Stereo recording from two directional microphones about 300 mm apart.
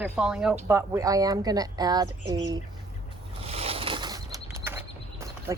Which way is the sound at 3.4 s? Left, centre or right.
Centre.